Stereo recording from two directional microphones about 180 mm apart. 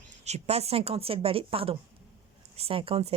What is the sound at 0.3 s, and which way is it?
Speech, 35° right (ahead or behind).